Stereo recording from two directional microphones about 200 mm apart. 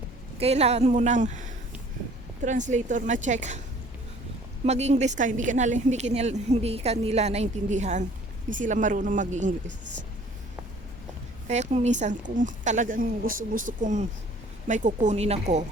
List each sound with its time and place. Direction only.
0.3 s a woman's voice: 30° right (ahead or behind)
2.4 s a woman's voice: 40° right (ahead or behind)
4.6 s a woman's voice: 35° right (ahead or behind)
11.4 s a woman's voice: 35° right (ahead or behind)